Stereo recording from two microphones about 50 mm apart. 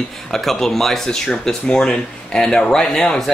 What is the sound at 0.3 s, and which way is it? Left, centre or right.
Speech, centre.